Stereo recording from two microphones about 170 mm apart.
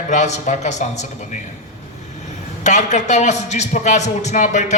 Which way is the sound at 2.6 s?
45° left (ahead or behind).